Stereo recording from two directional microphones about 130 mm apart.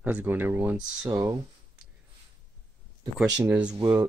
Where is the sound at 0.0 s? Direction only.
15° right (ahead or behind).